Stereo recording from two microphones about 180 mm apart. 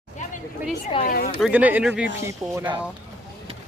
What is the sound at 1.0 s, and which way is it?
Speech, 50° left (ahead or behind).